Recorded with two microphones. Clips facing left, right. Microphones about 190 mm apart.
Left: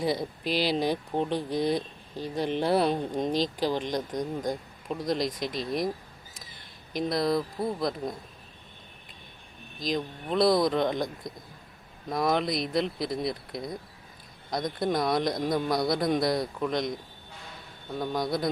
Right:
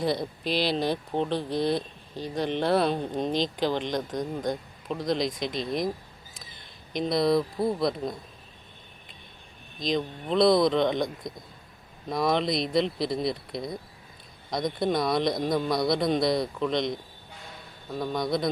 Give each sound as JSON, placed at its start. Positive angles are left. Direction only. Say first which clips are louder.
{"t": 0.0, "sound": "speech", "louder": "right 1 dB", "side_deg": 10}
{"t": 7.1, "sound": "speech", "louder": "right 4 dB", "side_deg": 0}
{"t": 9.8, "sound": "speech", "louder": "right 2 dB", "side_deg": 5}
{"t": 12.1, "sound": "speech", "louder": "right 1 dB", "side_deg": 5}
{"t": 12.5, "sound": "speech", "louder": "right 2 dB", "side_deg": -30}
{"t": 12.7, "sound": "speech", "louder": "right 3 dB", "side_deg": 0}
{"t": 13.1, "sound": "speech", "louder": "right 2 dB", "side_deg": -30}
{"t": 14.8, "sound": "speech", "louder": "right 1 dB", "side_deg": 0}
{"t": 17.9, "sound": "speech", "louder": "right 1 dB", "side_deg": 5}